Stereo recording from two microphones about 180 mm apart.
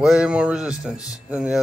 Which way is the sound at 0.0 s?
5° right (ahead or behind).